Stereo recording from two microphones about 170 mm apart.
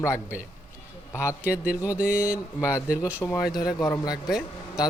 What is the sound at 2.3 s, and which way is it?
Speech, 20° left (ahead or behind).